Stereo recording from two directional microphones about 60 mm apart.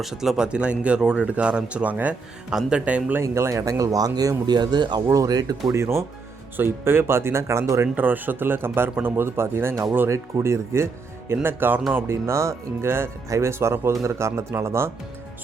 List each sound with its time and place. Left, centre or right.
0.0 s a man's voice: centre; by 2.1 s right
2.5 s speech: centre
3.2 s speech: right
5.7 s speech: right
6.6 s speech: right
7.9 s speech: right
11.4 s speech: right
11.9 s speech: right